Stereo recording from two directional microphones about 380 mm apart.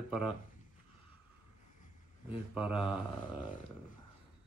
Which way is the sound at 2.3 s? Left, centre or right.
Centre.